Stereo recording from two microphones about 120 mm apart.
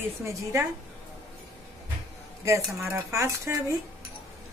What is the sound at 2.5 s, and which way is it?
Speech, 20° right (ahead or behind).